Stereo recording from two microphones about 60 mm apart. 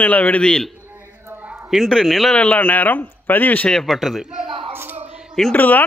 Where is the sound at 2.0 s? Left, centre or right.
Centre.